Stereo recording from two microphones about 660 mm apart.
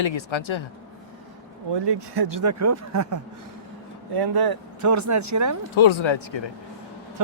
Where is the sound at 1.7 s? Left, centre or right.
Right.